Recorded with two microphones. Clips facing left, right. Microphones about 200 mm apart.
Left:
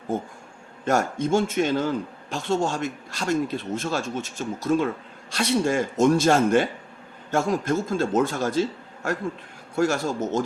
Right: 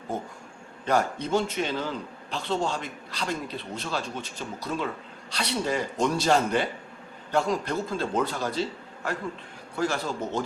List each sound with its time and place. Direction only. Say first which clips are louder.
0.9 s speech: left 3 dB; 45° left (ahead or behind)
9.7 s speech: left 5 dB; 45° left (ahead or behind)